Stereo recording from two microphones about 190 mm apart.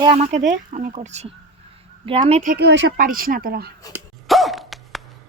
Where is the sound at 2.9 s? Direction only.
45° right (ahead or behind).